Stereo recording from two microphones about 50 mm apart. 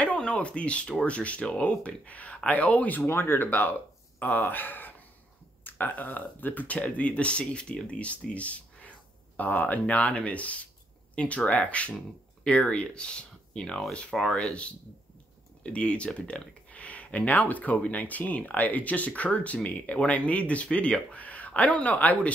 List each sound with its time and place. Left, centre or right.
0.0 s speech: left
3.0 s speech: left
3.4 s speech: left; by 13.8 s centre
14.1 s speech: centre
15.6 s speech: left